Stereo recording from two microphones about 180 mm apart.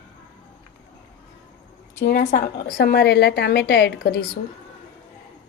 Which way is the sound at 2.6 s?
65° left (ahead or behind).